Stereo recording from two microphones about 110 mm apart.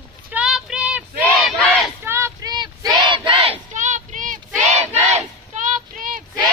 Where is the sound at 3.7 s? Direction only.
90° right.